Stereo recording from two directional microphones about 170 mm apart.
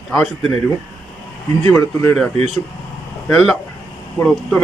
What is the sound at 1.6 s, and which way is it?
Speech, 15° left (ahead or behind).